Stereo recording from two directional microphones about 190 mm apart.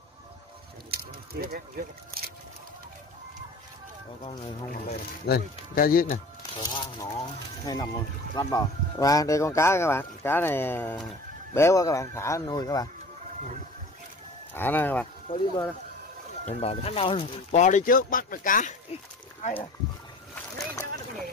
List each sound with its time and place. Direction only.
0.9 s speech: 55° right (ahead or behind)
4.8 s speech: 55° left (ahead or behind)
6.6 s speech: 20° left (ahead or behind)
14.5 s speech: 10° left (ahead or behind)
15.3 s speech: 25° left (ahead or behind)
19.4 s speech: 30° left (ahead or behind)